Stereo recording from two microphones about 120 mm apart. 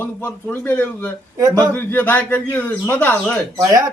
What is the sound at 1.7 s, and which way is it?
A man's voice, 15° left (ahead or behind).